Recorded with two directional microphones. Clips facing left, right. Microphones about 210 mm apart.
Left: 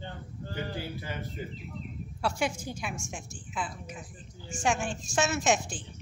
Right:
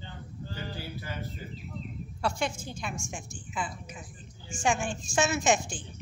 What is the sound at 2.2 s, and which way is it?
A woman's voice, 5° left (ahead or behind).